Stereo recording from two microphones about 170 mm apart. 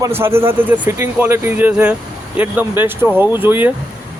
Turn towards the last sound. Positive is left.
turn(degrees=-10)  # may be behind; listen again after turning